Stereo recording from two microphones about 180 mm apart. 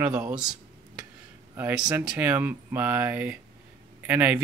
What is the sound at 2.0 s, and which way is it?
Speech, 10° right (ahead or behind).